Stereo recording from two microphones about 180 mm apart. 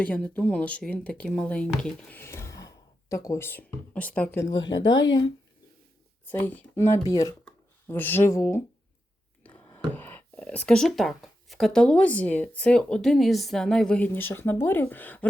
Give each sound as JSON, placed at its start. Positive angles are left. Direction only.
{"t": 0.0, "sound": "speech", "side_deg": 10}
{"t": 4.5, "sound": "speech", "side_deg": 90}
{"t": 6.3, "sound": "speech", "side_deg": 10}
{"t": 9.6, "sound": "speech", "side_deg": 10}